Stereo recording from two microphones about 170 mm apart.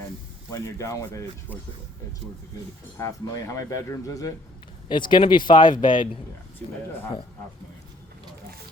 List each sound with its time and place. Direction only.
0.5 s speech: 15° left (ahead or behind)
3.0 s speech: 20° left (ahead or behind)
6.6 s speech: 10° left (ahead or behind)